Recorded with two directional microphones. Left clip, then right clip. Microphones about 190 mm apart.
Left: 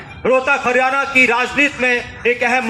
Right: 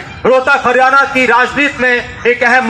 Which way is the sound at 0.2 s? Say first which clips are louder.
Right 5 dB; 25° right (ahead or behind).